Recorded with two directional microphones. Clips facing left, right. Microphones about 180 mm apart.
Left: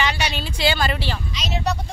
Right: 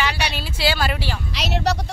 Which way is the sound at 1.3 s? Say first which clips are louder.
Right 4 dB; 70° right (ahead or behind).